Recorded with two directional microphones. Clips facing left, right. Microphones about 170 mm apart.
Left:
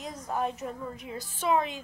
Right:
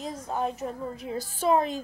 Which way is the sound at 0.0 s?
25° right (ahead or behind).